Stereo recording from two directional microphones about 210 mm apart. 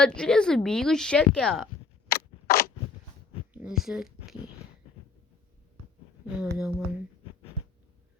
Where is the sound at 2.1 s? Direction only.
45° left (ahead or behind).